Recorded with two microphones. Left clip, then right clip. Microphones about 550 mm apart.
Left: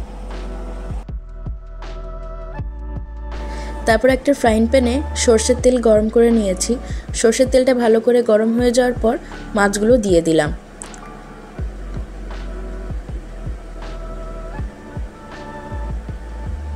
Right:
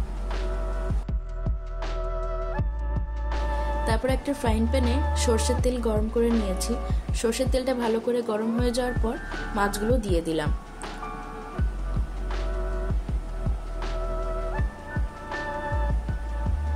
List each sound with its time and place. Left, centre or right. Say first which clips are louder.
3.8 s a woman's voice: left 15 dB; right